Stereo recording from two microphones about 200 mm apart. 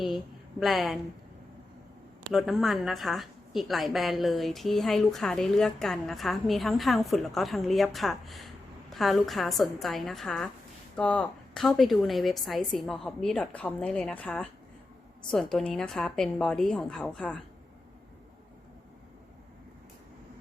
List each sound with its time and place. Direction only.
0.6 s a woman's voice: centre (ahead or behind)
2.3 s a woman's voice: centre (ahead or behind)